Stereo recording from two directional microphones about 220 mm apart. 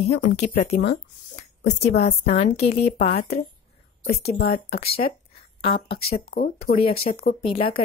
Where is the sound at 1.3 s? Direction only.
30° left (ahead or behind).